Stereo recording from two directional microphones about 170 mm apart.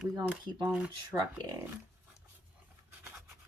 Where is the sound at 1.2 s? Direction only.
25° right (ahead or behind).